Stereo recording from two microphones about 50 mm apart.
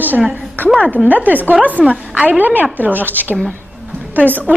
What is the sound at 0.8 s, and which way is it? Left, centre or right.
A woman's voice, right.